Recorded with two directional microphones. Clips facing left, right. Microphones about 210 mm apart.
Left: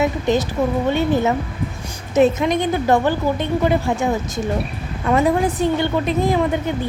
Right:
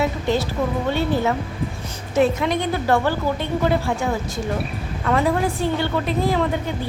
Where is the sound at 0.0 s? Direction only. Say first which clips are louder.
Left 3 dB; 20° left (ahead or behind).